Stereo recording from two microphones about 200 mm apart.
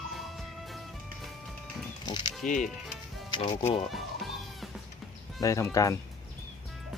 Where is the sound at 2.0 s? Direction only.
20° left (ahead or behind).